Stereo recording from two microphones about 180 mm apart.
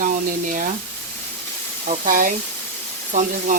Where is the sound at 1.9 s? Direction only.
50° right (ahead or behind).